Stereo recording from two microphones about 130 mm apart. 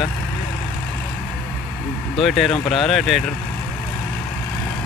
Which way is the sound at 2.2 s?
Centre (ahead or behind).